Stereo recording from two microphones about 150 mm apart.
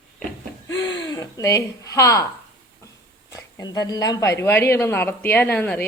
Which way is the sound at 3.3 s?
25° left (ahead or behind).